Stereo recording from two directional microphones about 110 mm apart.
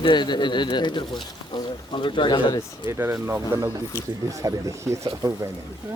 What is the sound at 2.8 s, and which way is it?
Speech, 25° right (ahead or behind).